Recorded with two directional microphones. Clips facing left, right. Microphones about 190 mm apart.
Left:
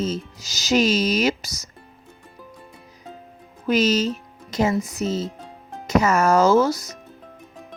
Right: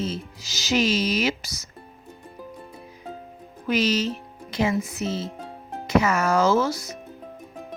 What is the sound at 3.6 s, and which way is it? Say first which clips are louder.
Speech: left 3 dB; 40° left (ahead or behind).